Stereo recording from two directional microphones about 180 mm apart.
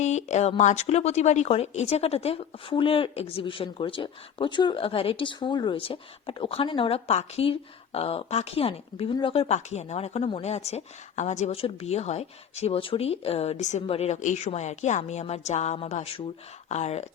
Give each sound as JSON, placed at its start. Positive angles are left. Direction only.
{"t": 0.0, "sound": "speech", "side_deg": 40}